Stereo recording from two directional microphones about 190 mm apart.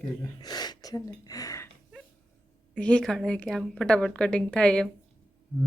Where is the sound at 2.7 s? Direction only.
5° left (ahead or behind).